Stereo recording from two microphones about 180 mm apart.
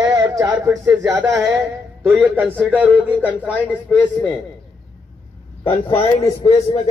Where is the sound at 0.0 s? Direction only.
20° right (ahead or behind).